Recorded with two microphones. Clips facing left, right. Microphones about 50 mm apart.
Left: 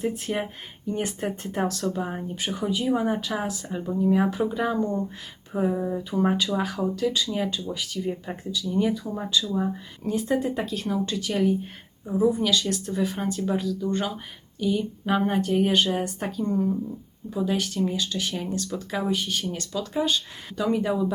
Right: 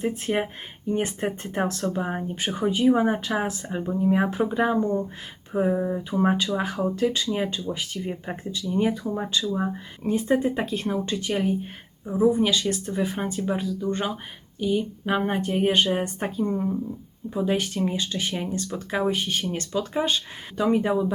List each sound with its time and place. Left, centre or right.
0.0 s speech: right
3.7 s speech: right
8.1 s speech: right